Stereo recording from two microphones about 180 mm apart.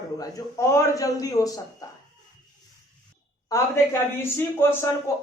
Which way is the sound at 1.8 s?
20° left (ahead or behind).